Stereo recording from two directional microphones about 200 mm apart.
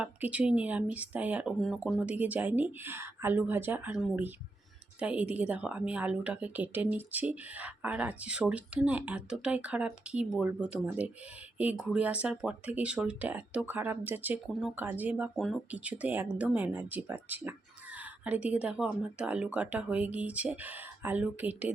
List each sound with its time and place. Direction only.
0.0 s speech: 5° right (ahead or behind)